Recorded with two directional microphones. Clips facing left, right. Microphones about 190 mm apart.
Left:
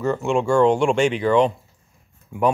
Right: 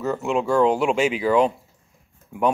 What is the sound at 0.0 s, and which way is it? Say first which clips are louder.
Speech: left 2 dB; 5° right (ahead or behind).